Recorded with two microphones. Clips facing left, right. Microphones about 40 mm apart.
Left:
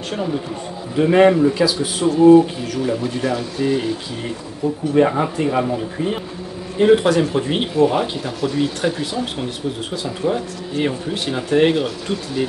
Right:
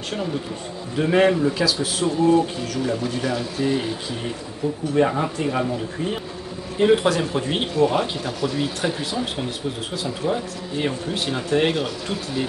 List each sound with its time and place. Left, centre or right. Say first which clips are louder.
0.1 s speech: left 4 dB; centre
4.9 s speech: left 4 dB; centre